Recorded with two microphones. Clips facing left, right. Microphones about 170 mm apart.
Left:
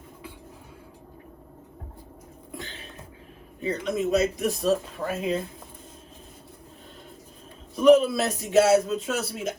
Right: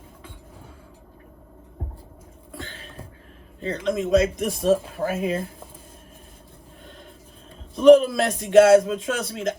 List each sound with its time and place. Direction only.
3.6 s a man's voice: 10° left (ahead or behind)
7.8 s a man's voice: 5° left (ahead or behind)